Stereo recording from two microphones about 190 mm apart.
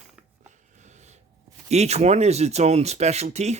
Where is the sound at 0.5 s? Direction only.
40° right (ahead or behind).